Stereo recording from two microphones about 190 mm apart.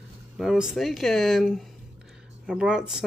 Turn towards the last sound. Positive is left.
turn(degrees=-5)  # may be behind; listen again after turning